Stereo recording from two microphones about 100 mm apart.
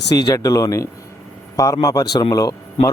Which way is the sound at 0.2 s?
35° left (ahead or behind).